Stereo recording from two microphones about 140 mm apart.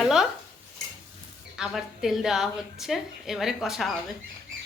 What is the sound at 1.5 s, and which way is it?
A woman's voice, 5° right (ahead or behind).